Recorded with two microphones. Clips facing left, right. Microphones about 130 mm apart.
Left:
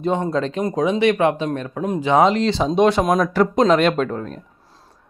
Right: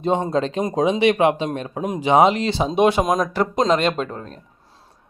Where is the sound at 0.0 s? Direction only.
20° right (ahead or behind).